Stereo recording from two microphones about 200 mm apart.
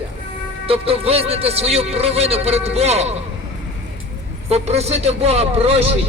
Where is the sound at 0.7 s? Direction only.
30° right (ahead or behind).